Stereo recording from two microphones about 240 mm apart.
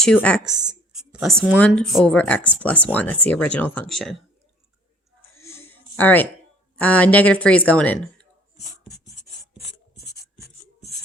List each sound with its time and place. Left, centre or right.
0.0 s speech: centre
5.4 s a sound: centre
6.7 s speech: centre
9.6 s writing: left